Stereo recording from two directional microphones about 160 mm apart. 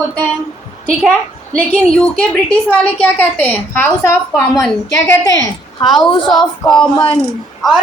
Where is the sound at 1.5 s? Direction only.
5° left (ahead or behind).